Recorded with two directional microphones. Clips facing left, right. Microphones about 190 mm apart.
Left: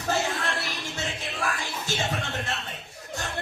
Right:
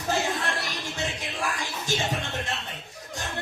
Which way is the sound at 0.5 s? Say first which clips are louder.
Even; 15° right (ahead or behind).